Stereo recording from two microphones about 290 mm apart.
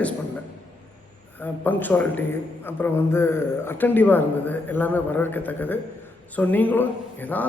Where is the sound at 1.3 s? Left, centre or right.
Centre.